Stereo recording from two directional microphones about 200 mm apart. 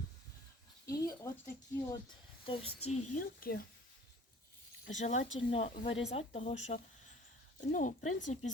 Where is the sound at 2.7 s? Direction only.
90° left.